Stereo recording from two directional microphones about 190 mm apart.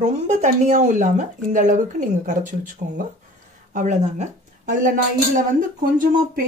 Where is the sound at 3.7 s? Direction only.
40° right (ahead or behind).